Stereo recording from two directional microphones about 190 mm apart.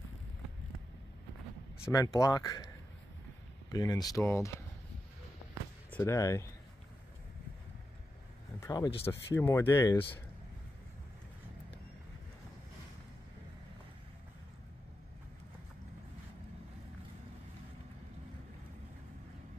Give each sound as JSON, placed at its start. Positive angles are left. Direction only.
{"t": 1.9, "sound": "speech", "side_deg": 20}
{"t": 3.7, "sound": "speech", "side_deg": 20}
{"t": 5.9, "sound": "speech", "side_deg": 10}
{"t": 8.5, "sound": "speech", "side_deg": 20}